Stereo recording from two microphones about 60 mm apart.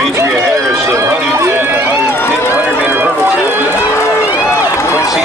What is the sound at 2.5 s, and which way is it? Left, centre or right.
Run, right.